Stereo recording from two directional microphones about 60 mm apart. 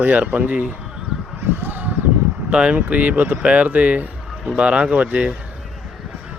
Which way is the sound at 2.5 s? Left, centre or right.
Centre.